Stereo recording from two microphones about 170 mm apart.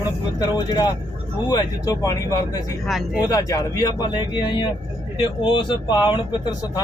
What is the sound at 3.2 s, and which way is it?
A man's voice, 20° left (ahead or behind).